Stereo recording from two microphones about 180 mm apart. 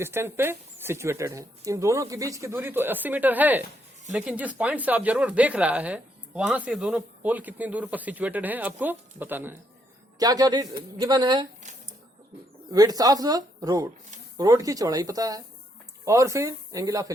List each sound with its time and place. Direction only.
0.0 s speech: 15° right (ahead or behind)
12.7 s speech: 20° right (ahead or behind)